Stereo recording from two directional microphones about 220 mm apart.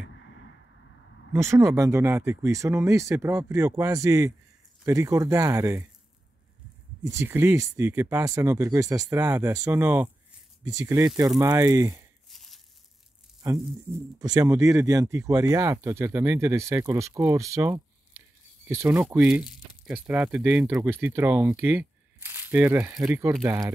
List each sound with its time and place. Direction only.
1.3 s speech: 10° right (ahead or behind)
7.1 s speech: 10° right (ahead or behind)
12.3 s crumpling: centre (ahead or behind)
13.4 s speech: 15° right (ahead or behind)